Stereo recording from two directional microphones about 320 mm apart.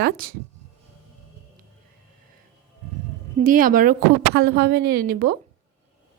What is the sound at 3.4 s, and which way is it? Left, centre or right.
A woman's voice, right.